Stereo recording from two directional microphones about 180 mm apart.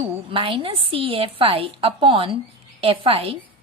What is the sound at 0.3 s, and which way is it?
A woman's voice, 30° right (ahead or behind).